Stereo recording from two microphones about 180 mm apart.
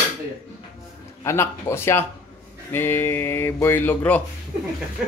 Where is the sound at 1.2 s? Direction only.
15° left (ahead or behind).